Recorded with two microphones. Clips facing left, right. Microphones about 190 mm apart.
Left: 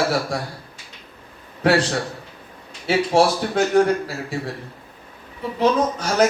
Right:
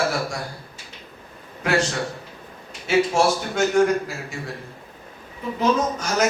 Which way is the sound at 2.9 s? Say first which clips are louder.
Left 2 dB; 35° left (ahead or behind).